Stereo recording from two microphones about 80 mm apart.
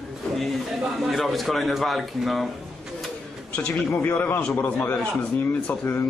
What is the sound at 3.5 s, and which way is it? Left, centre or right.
A man's voice, centre.